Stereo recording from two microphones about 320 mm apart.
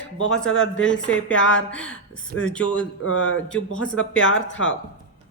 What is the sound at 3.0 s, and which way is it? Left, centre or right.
Speech, left.